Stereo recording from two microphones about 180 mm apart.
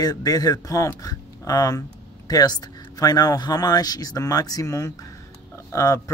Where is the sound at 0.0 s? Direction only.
20° left (ahead or behind).